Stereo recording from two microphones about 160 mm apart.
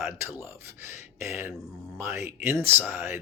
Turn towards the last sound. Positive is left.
turn(degrees=-10)  # may be behind; listen again after turning